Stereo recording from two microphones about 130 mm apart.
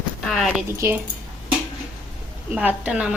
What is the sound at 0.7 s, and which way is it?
Speech, 20° right (ahead or behind).